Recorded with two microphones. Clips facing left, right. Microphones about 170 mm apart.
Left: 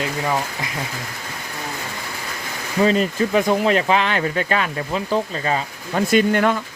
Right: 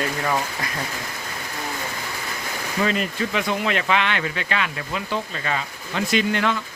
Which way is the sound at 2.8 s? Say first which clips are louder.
Left 6 dB; 35° left (ahead or behind).